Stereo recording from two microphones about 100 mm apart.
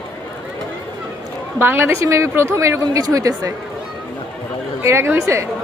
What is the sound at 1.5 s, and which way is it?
A woman's voice, 25° right (ahead or behind).